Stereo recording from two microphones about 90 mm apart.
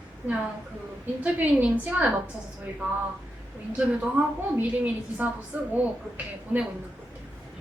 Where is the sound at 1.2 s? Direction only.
15° right (ahead or behind).